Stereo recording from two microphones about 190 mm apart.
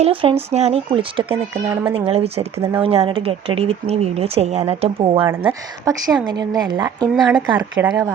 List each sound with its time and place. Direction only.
0.0 s speech: 30° right (ahead or behind)
1.6 s speech: 10° right (ahead or behind)
2.0 s speech: 30° right (ahead or behind)
5.3 s speech: 10° right (ahead or behind)